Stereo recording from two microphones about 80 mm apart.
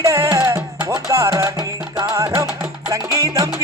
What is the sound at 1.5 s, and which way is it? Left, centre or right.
Music, right.